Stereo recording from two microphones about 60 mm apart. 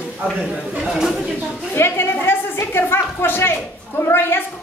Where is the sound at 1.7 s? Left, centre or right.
Left.